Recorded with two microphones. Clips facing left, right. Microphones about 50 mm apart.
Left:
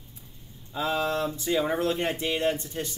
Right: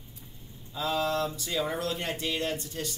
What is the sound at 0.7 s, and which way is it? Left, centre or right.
Speech, left.